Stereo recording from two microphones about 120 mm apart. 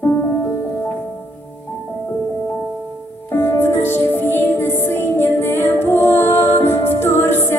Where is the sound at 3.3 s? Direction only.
20° left (ahead or behind).